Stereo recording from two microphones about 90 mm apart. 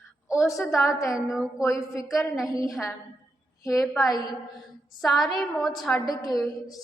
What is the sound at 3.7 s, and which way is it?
A woman's voice, centre (ahead or behind).